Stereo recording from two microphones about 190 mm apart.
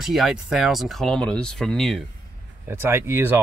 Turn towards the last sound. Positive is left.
turn(degrees=-15)  # may be behind; listen again after turning